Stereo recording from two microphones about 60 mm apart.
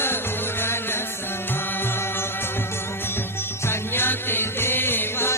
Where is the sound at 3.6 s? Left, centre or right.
Left.